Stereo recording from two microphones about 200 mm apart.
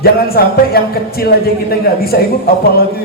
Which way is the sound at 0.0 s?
50° left (ahead or behind).